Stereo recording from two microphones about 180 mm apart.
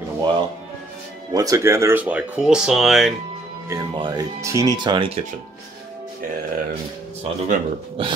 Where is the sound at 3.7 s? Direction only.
25° right (ahead or behind).